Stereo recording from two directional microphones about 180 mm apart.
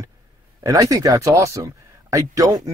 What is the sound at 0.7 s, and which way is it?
Speech, 20° right (ahead or behind).